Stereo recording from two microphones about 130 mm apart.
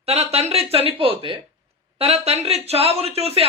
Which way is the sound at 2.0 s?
50° right (ahead or behind).